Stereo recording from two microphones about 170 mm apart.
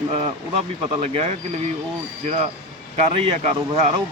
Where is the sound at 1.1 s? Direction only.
40° right (ahead or behind).